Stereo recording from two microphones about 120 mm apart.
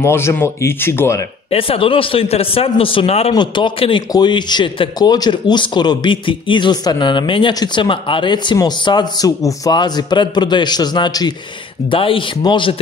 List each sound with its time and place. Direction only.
0.0 s speech: 20° left (ahead or behind)
1.5 s speech: 50° left (ahead or behind)
3.3 s speech: 40° left (ahead or behind)
11.9 s speech: 50° left (ahead or behind)